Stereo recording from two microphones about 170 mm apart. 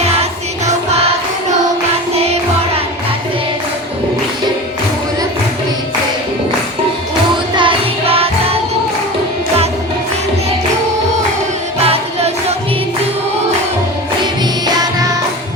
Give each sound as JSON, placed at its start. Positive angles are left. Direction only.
{"t": 0.0, "sound": "music", "side_deg": -40}
{"t": 7.5, "sound": "music", "side_deg": -30}
{"t": 11.8, "sound": "music", "side_deg": -35}